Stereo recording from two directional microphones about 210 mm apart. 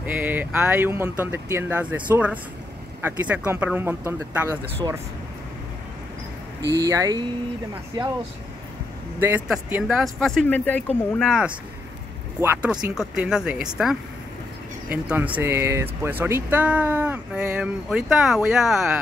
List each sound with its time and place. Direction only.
0.0 s speech: 10° right (ahead or behind)
6.8 s speech: 15° right (ahead or behind)
9.2 s speech: 10° right (ahead or behind)
14.9 s speech: 5° right (ahead or behind)